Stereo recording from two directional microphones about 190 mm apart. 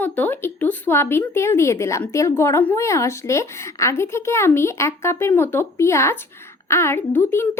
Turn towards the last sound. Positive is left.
turn(degrees=10)  # may be behind; listen again after turning